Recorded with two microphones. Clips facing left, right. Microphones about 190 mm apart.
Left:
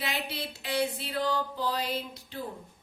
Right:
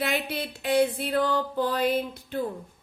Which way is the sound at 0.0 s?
55° right (ahead or behind).